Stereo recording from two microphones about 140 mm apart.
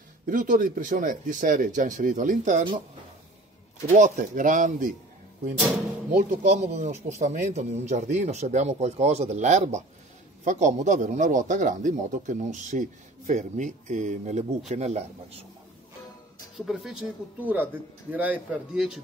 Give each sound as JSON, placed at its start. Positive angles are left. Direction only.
{"t": 0.3, "sound": "speech", "side_deg": -70}
{"t": 3.9, "sound": "speech", "side_deg": -65}
{"t": 6.3, "sound": "a man's voice", "side_deg": -55}
{"t": 16.5, "sound": "a man's voice", "side_deg": 0}